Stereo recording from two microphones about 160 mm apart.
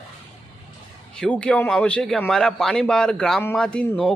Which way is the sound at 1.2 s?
5° left (ahead or behind).